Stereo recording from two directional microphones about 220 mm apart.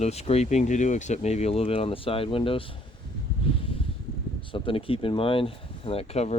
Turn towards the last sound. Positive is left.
turn(degrees=30)  # may be behind; listen again after turning